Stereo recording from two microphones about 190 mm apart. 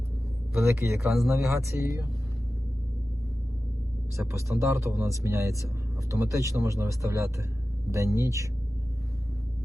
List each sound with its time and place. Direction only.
0.5 s speech: 15° right (ahead or behind)
4.2 s speech: 15° right (ahead or behind)